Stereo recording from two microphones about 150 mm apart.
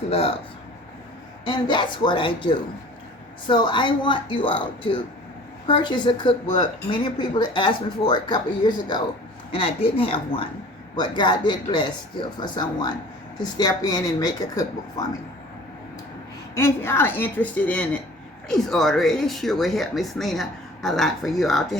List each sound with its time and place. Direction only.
0.1 s a woman's voice: 40° left (ahead or behind)
1.5 s a woman's voice: 30° left (ahead or behind)
16.6 s a woman's voice: 15° left (ahead or behind)